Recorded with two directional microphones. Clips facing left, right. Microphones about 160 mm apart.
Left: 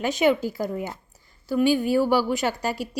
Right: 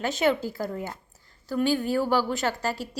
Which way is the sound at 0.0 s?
15° left (ahead or behind).